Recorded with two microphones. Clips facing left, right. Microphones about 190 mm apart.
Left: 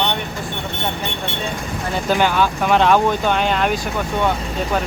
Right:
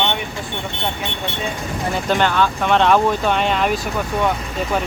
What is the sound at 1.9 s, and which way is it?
Speech, 5° left (ahead or behind).